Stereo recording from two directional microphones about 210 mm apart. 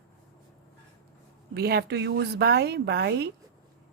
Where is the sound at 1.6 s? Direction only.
50° right (ahead or behind).